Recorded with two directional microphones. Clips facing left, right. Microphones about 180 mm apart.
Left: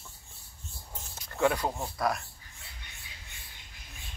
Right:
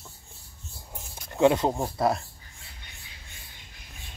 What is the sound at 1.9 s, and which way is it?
Speech, 25° right (ahead or behind).